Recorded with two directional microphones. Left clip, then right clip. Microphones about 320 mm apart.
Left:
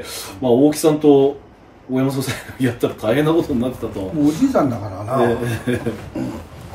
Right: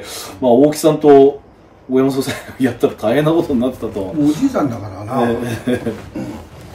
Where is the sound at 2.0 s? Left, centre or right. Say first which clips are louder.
Right 6 dB; centre.